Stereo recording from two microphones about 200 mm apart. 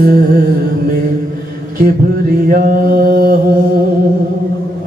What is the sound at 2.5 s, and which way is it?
Mantra, 45° right (ahead or behind).